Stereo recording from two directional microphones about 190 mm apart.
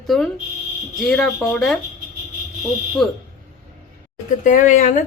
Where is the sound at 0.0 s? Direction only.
Centre (ahead or behind).